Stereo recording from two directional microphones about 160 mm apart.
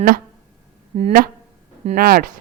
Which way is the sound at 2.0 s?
70° right (ahead or behind).